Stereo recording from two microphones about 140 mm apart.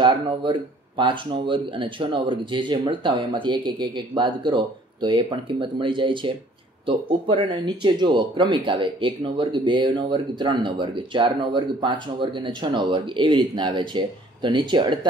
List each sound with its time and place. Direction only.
0.0 s speech: 35° right (ahead or behind)